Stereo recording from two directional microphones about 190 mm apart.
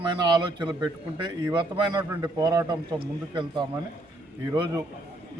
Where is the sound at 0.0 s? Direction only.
25° right (ahead or behind).